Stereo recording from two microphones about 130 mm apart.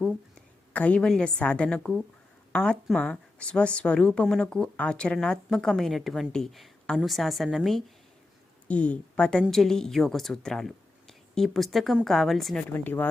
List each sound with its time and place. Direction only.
0.3 s a woman's voice: 10° left (ahead or behind)
12.7 s speech: 15° left (ahead or behind)